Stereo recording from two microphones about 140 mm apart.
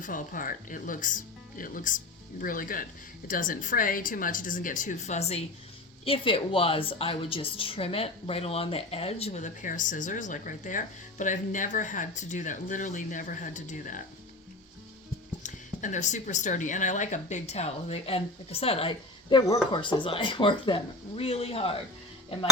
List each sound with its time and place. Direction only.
0.0 s speech: 70° left (ahead or behind)
2.4 s speech: 85° left; by 5.4 s 55° left (ahead or behind)
6.1 s a woman's voice: 40° left (ahead or behind); by 14.0 s 70° left (ahead or behind)
15.4 s a woman's voice: 60° left (ahead or behind); by 18.9 s 45° left (ahead or behind)
19.3 s speech: 30° left (ahead or behind); by 21.8 s 45° left (ahead or behind)